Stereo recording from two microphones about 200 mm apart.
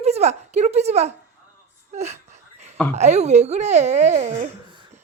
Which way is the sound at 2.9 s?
35° right (ahead or behind).